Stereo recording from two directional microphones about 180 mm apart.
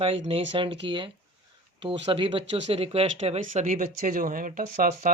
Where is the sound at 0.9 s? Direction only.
25° right (ahead or behind).